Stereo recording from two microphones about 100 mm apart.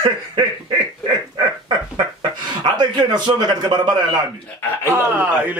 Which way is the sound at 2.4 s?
45° right (ahead or behind).